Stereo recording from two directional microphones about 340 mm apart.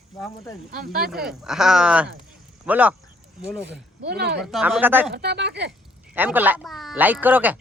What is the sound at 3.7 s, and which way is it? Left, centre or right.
Speech, right.